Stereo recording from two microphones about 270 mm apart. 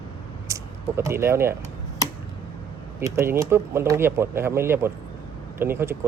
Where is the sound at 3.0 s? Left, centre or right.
Centre.